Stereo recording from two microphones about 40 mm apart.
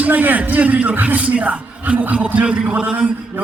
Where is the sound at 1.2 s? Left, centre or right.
Right.